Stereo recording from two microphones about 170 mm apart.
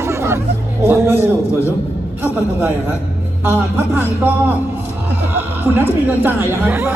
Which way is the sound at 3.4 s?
10° right (ahead or behind).